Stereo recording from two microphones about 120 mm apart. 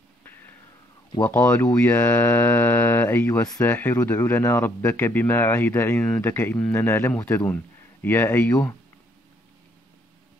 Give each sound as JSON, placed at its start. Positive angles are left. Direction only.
{"t": 1.2, "sound": "speech", "side_deg": 15}
{"t": 1.8, "sound": "mantra", "side_deg": 20}
{"t": 3.6, "sound": "speech", "side_deg": 15}